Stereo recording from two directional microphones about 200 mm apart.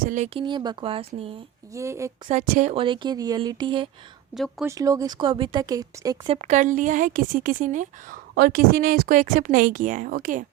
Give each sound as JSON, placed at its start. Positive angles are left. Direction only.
{"t": 0.0, "sound": "speech", "side_deg": -40}
{"t": 0.3, "sound": "speech", "side_deg": -25}
{"t": 1.7, "sound": "a woman's voice", "side_deg": -15}
{"t": 2.3, "sound": "speech", "side_deg": -35}
{"t": 4.4, "sound": "speech", "side_deg": 0}
{"t": 4.6, "sound": "speech", "side_deg": -15}
{"t": 6.3, "sound": "a woman's voice", "side_deg": -35}